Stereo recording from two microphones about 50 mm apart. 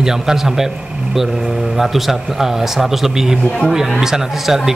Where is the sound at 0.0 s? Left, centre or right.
Centre.